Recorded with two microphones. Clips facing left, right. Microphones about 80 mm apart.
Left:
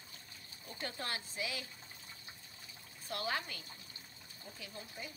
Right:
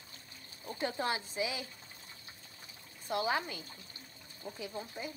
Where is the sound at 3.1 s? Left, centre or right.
Centre.